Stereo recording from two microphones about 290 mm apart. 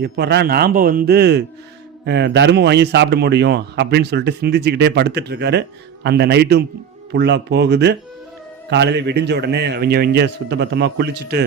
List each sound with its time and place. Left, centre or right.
0.0 s a man's voice: right